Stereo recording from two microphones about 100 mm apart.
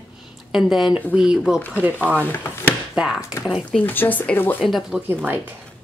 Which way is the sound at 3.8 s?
20° left (ahead or behind).